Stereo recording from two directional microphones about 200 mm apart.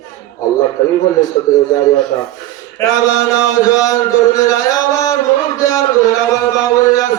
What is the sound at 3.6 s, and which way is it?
Speech, 15° left (ahead or behind).